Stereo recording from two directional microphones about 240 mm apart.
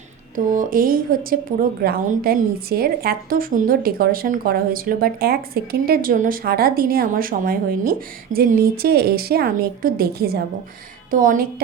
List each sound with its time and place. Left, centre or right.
0.3 s a woman's voice: right